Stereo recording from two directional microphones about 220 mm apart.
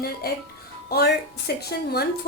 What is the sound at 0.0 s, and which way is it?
A woman's voice, 45° left (ahead or behind).